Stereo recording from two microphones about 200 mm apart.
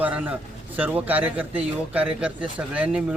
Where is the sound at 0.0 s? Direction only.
5° right (ahead or behind).